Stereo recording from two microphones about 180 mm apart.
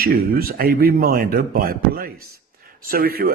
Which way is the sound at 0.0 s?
55° right (ahead or behind).